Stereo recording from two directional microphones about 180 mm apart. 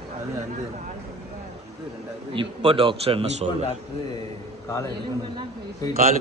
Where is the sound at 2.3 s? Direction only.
30° right (ahead or behind).